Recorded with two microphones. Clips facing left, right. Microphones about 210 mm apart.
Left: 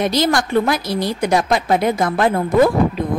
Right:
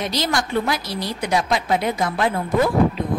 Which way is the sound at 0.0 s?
50° left (ahead or behind).